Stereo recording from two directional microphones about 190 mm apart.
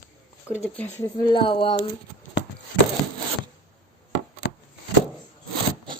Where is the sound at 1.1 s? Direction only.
25° left (ahead or behind).